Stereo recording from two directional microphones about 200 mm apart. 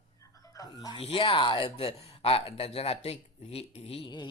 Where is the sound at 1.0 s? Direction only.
30° left (ahead or behind).